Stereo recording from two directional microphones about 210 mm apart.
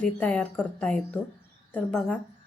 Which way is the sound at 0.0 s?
5° left (ahead or behind).